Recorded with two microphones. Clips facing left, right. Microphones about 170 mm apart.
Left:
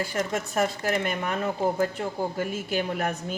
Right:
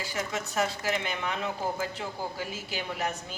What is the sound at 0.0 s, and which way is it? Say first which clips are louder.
A woman's voice: left 5 dB; 55° left (ahead or behind).